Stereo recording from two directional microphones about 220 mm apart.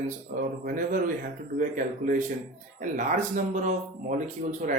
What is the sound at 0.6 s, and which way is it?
Speech, 40° right (ahead or behind).